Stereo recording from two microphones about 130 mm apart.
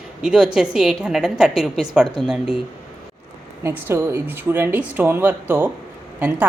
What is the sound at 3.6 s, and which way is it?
Speech, 20° right (ahead or behind).